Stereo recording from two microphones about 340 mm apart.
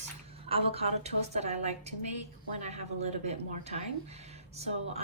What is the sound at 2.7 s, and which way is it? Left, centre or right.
Speech, centre.